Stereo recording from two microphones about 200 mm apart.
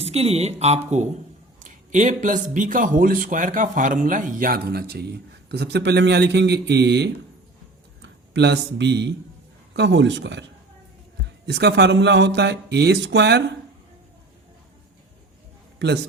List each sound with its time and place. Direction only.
0.0 s a man's voice: 30° right (ahead or behind); by 13.4 s 55° right (ahead or behind)